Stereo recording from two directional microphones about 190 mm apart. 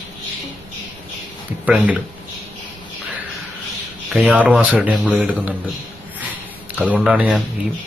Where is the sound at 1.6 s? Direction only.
10° right (ahead or behind).